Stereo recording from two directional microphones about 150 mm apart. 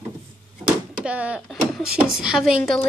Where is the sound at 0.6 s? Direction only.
10° right (ahead or behind).